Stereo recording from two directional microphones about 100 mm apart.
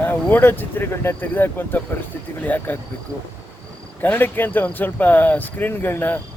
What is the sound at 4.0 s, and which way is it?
Speech, 20° left (ahead or behind).